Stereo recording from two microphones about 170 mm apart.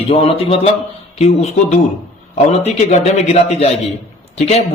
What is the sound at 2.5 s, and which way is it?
Speech, 40° left (ahead or behind).